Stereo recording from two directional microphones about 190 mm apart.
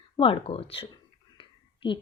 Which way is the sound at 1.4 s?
25° left (ahead or behind).